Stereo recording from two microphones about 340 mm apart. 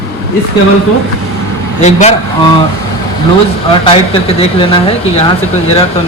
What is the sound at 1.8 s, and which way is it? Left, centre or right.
Speech, centre.